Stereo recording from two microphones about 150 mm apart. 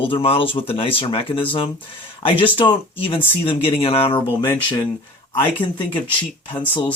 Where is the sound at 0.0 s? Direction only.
35° left (ahead or behind).